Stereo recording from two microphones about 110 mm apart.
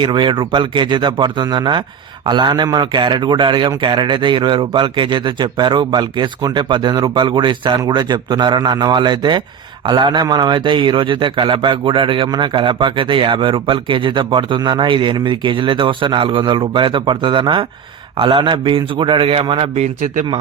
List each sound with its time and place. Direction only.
0.0 s a man's voice: 45° right (ahead or behind)